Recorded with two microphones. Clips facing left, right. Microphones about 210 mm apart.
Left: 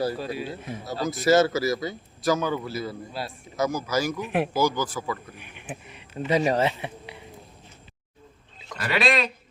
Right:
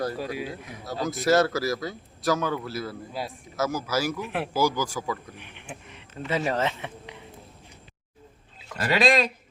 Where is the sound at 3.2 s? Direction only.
15° right (ahead or behind).